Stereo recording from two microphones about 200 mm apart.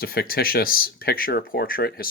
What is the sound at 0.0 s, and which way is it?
Speech, 50° left (ahead or behind).